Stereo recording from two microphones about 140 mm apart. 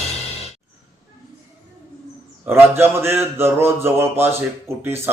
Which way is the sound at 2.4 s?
15° right (ahead or behind).